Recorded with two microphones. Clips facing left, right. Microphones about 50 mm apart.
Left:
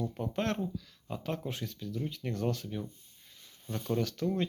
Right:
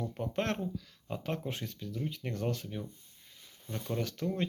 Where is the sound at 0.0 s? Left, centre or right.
Right.